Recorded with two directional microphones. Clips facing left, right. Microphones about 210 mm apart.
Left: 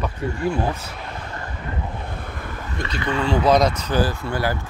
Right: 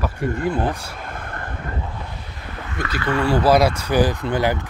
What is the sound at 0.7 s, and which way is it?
Speech, 10° right (ahead or behind).